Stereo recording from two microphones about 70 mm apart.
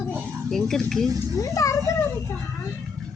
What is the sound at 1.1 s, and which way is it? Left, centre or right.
Speech, right.